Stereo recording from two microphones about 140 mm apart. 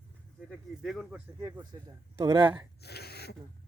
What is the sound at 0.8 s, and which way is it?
Speech, 5° right (ahead or behind).